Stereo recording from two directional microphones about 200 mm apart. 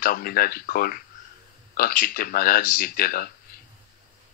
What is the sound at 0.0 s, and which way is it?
Speech, 45° left (ahead or behind).